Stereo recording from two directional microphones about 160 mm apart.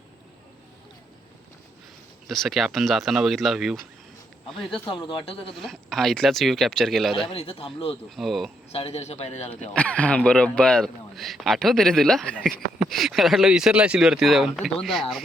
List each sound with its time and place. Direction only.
2.2 s speech: centre (ahead or behind)
4.9 s a man's voice: 30° left (ahead or behind)
5.5 s speech: centre (ahead or behind)
7.3 s a man's voice: 35° left (ahead or behind)
8.1 s speech: centre (ahead or behind)
8.7 s a man's voice: 40° left (ahead or behind)
9.7 s speech: 10° left (ahead or behind)